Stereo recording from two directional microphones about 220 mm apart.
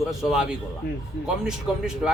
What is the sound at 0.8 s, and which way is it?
Speech, 45° left (ahead or behind).